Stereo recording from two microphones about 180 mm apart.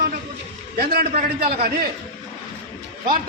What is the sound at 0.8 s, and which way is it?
Speech, 55° right (ahead or behind).